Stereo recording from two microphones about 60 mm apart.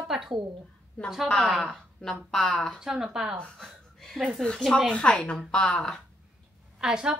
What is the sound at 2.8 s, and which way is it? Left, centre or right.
Speech, centre.